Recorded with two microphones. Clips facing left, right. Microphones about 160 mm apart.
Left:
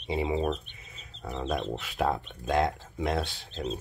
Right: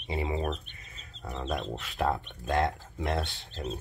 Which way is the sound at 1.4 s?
Centre (ahead or behind).